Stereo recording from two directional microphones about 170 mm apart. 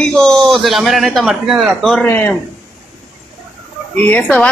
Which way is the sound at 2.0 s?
10° left (ahead or behind).